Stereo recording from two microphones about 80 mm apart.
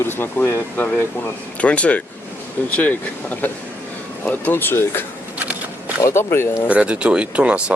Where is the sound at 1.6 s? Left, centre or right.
Centre.